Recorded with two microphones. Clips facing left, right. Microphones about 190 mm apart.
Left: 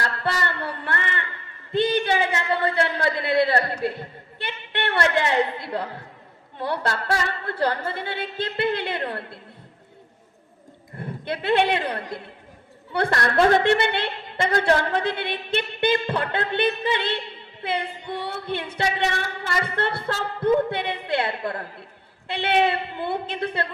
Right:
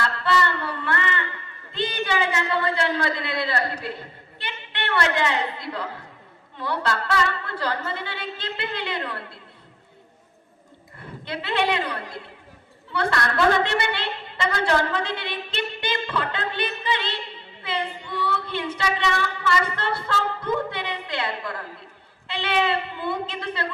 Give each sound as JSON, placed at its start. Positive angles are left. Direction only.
{"t": 0.0, "sound": "a sound", "side_deg": 45}
{"t": 1.7, "sound": "a woman's voice", "side_deg": 55}
{"t": 10.9, "sound": "a man's voice", "side_deg": 55}